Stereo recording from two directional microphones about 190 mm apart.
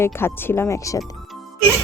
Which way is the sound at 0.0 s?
15° left (ahead or behind).